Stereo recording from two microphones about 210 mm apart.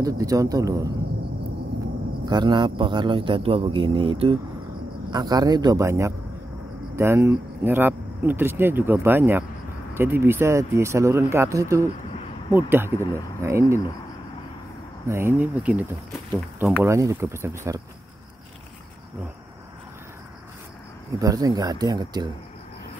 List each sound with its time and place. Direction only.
0.0 s speech: 15° right (ahead or behind)
2.2 s a man's voice: 20° right (ahead or behind)
15.0 s speech: 10° right (ahead or behind)
16.8 s speech: 15° right (ahead or behind)
21.2 s a man's voice: 15° right (ahead or behind)